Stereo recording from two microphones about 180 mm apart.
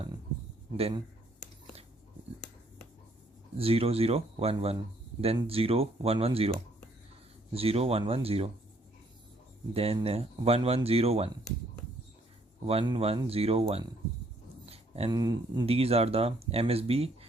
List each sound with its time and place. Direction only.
0.8 s speech: 35° right (ahead or behind)
3.6 s speech: 30° right (ahead or behind)
7.5 s speech: 35° right (ahead or behind)
9.7 s speech: 35° right (ahead or behind)
12.6 s speech: 30° right (ahead or behind)
14.7 s a sound: 35° right (ahead or behind)
15.1 s speech: 20° right (ahead or behind)